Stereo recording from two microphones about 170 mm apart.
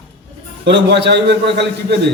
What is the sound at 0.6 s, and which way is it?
A man's voice, 90° right.